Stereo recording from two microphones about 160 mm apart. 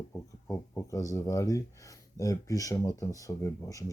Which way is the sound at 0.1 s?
10° left (ahead or behind).